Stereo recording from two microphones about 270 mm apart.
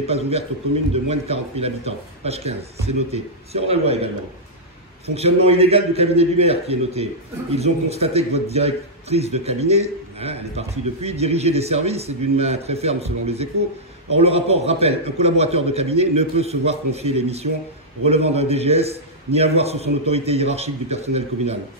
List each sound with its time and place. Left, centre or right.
0.0 s a man's voice: right